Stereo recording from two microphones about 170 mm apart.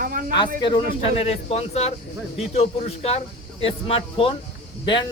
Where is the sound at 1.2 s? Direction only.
35° left (ahead or behind).